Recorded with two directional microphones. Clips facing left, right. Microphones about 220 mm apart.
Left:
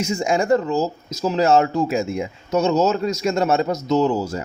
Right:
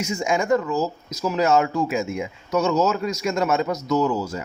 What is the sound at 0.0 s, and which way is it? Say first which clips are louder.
Speech: left 3 dB; 30° left (ahead or behind).